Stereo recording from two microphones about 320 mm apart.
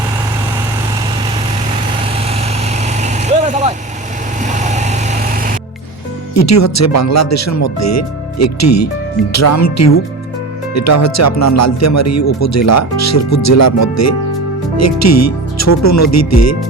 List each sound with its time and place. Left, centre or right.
2.8 s vehicle: right
6.3 s speech: left